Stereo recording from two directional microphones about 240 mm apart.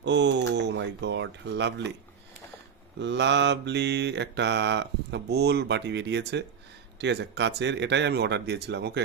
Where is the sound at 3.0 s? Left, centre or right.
Right.